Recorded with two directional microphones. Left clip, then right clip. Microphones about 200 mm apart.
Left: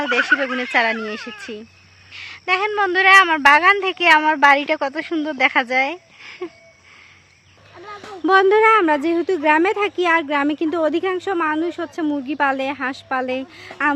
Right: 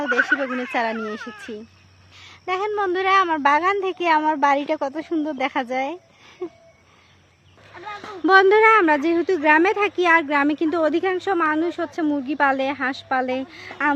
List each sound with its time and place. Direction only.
0.1 s speech: 35° left (ahead or behind)
0.7 s speech: centre (ahead or behind)
1.2 s speech: 50° left (ahead or behind)
2.1 s speech: centre (ahead or behind)
8.2 s speech: centre (ahead or behind)